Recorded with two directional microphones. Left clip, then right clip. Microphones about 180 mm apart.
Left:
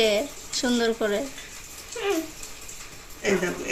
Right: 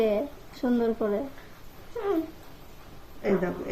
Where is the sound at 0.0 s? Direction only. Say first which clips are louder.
Left 3 dB; centre (ahead or behind).